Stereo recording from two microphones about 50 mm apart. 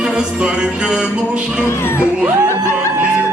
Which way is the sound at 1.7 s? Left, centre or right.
Left.